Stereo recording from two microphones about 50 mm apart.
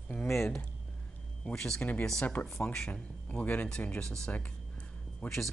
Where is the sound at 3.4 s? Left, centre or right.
Left; by 5.5 s centre.